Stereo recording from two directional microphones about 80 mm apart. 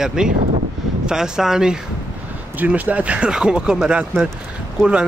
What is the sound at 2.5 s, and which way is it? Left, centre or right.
Speech, centre.